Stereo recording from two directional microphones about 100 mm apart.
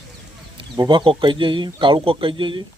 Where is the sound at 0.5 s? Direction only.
50° right (ahead or behind).